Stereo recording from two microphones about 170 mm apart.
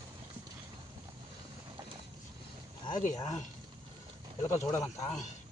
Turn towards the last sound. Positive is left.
turn(degrees=15)  # may be behind; listen again after turning